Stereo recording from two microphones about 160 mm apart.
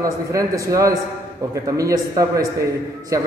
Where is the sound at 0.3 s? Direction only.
20° right (ahead or behind).